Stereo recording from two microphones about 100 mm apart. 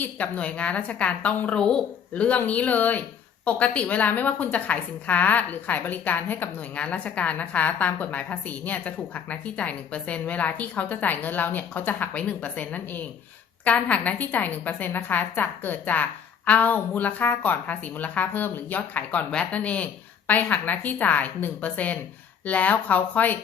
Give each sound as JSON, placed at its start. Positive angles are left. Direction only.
{"t": 0.0, "sound": "a woman's voice", "side_deg": 15}